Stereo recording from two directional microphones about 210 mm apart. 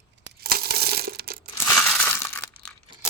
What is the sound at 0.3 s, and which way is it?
Crushing, 45° right (ahead or behind).